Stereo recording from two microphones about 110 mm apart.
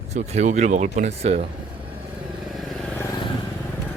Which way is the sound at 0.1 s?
90° right.